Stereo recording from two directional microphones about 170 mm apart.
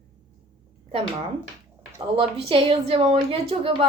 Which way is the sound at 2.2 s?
35° right (ahead or behind).